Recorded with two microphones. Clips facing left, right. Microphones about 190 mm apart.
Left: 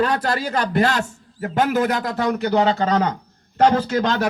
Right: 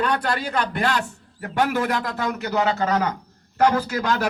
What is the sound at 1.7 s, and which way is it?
A man's voice, 40° left (ahead or behind).